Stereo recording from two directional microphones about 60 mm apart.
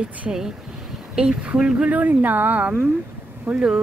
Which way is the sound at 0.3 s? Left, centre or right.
Centre.